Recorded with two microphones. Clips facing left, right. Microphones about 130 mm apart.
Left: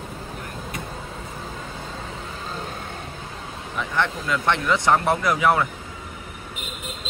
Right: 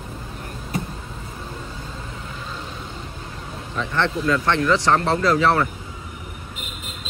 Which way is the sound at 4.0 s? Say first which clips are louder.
Right 4 dB; 15° left (ahead or behind).